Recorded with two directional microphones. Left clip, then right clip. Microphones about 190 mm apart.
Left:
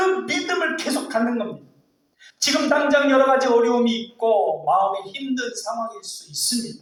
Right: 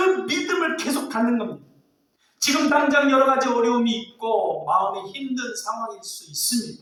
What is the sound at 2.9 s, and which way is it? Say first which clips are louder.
Speech: left 4 dB; 25° right (ahead or behind).